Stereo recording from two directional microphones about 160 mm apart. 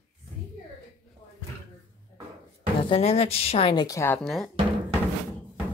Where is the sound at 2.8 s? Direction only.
35° left (ahead or behind).